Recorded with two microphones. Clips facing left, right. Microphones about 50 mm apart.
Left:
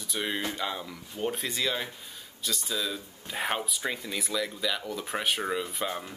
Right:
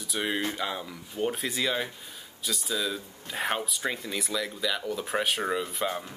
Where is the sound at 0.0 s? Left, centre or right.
Centre.